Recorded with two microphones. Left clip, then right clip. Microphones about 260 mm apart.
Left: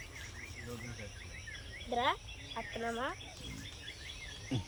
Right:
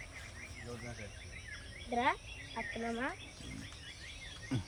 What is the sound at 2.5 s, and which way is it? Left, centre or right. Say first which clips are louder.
Speech: left 1 dB; left.